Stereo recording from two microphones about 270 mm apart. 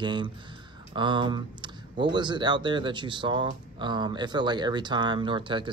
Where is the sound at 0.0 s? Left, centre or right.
Centre.